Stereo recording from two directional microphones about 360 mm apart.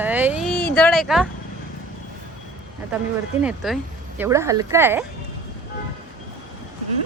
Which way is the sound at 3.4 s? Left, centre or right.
Centre.